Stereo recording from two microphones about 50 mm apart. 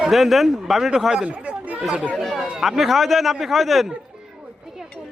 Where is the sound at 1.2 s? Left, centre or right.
Right.